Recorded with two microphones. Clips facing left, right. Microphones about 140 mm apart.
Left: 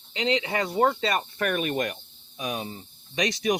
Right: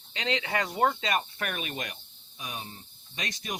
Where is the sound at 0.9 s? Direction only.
35° left (ahead or behind).